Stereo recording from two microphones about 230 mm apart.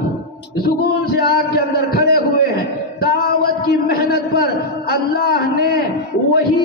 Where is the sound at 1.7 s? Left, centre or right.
Left.